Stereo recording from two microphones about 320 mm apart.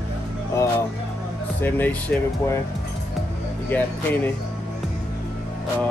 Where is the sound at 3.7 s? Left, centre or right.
Centre.